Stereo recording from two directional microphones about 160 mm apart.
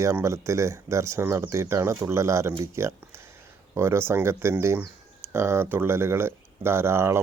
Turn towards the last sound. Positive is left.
turn(degrees=-15)  # may be behind; listen again after turning